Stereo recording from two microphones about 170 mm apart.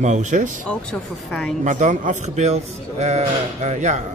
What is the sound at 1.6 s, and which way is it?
A man's voice, 50° right (ahead or behind).